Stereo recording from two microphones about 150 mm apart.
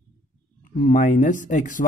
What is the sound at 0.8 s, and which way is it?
Speech, 55° left (ahead or behind).